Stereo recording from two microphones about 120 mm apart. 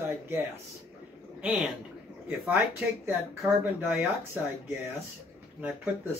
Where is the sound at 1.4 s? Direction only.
5° right (ahead or behind).